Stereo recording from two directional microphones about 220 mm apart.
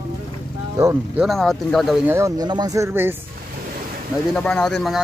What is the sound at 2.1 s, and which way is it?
Speech, 15° right (ahead or behind).